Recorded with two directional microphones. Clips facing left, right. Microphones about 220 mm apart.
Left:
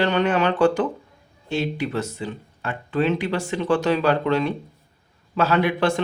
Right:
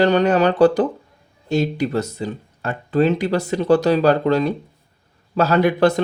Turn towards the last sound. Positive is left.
turn(degrees=-40)  # may be behind; listen again after turning